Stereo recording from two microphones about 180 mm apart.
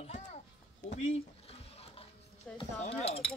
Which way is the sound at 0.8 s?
40° left (ahead or behind).